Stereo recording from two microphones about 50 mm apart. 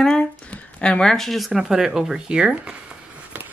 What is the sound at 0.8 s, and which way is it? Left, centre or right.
Speech, centre.